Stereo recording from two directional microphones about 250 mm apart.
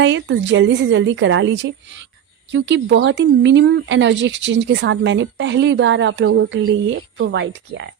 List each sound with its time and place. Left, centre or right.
0.0 s speech: right